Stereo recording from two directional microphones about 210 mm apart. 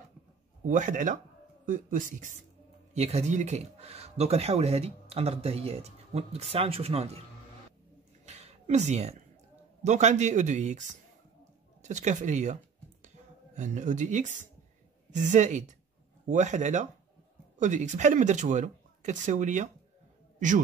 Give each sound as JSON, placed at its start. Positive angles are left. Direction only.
{"t": 0.7, "sound": "speech", "side_deg": -35}
{"t": 8.3, "sound": "a sound", "side_deg": -30}
{"t": 9.8, "sound": "speech", "side_deg": -35}
{"t": 13.6, "sound": "a man's voice", "side_deg": -35}